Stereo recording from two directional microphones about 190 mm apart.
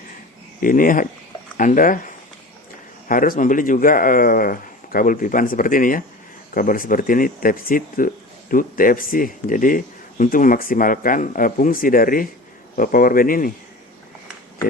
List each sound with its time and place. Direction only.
0.6 s speech: 45° left (ahead or behind)